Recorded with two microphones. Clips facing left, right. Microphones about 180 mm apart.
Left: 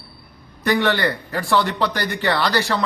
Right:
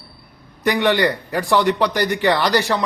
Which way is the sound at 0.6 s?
15° right (ahead or behind).